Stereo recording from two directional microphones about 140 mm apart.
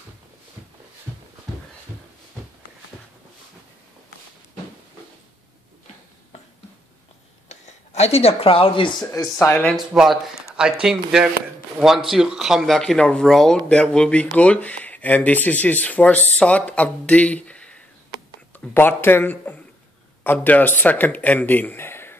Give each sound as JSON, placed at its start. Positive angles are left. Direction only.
{"t": 7.4, "sound": "speech", "side_deg": 50}
{"t": 9.1, "sound": "speech", "side_deg": 20}
{"t": 9.8, "sound": "speech", "side_deg": -5}